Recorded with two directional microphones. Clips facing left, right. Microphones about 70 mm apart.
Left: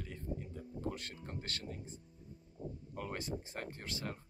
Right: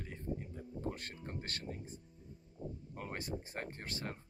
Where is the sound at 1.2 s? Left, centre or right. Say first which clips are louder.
Right 1 dB; right.